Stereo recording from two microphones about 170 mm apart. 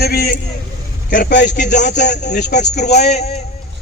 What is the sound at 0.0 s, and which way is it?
Speech, 70° left (ahead or behind).